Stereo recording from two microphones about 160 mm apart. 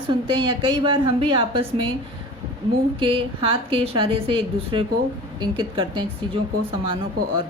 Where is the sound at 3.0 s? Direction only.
35° right (ahead or behind).